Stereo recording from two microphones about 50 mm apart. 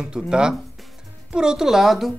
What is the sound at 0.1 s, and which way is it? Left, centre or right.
Speech, centre.